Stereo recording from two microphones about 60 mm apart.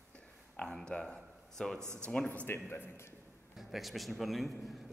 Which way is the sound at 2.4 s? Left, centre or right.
Left.